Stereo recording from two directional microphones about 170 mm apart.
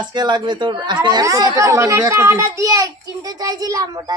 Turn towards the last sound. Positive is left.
turn(degrees=-20)  # may be behind; listen again after turning